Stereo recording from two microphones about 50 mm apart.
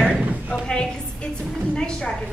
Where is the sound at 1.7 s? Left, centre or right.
Centre.